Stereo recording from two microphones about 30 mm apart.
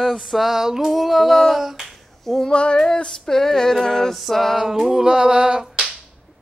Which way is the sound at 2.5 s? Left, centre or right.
Left.